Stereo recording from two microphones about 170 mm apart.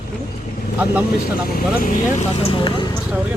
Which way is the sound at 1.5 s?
55° left (ahead or behind).